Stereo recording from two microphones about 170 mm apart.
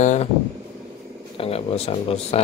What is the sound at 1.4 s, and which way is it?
Speech, 35° left (ahead or behind).